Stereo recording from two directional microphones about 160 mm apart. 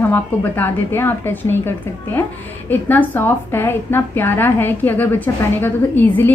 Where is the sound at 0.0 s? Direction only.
10° left (ahead or behind).